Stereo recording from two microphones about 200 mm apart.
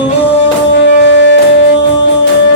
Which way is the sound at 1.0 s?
60° left (ahead or behind).